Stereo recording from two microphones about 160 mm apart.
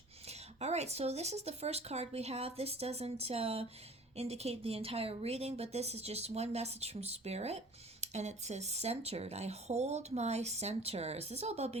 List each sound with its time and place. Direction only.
0.3 s speech: 40° right (ahead or behind)